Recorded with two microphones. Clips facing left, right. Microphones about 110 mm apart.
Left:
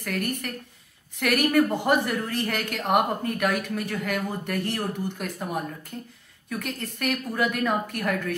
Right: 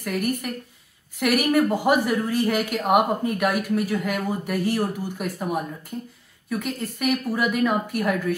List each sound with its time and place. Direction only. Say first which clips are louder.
0.0 s speech: right 4 dB; 10° right (ahead or behind)